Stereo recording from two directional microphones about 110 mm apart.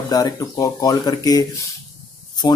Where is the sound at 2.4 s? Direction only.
45° left (ahead or behind).